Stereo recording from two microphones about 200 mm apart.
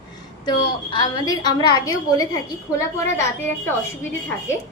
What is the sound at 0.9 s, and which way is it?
A woman's voice, 20° left (ahead or behind).